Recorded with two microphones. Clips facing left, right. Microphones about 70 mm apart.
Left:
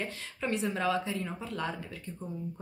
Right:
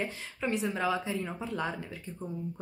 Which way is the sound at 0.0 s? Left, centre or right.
Centre.